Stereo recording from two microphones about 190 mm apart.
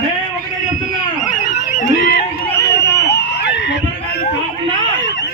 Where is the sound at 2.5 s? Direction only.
15° left (ahead or behind).